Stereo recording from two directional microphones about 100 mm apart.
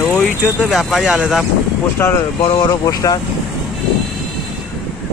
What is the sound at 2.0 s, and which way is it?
Speech, 20° left (ahead or behind).